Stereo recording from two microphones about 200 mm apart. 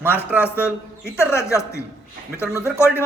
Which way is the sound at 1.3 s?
15° left (ahead or behind).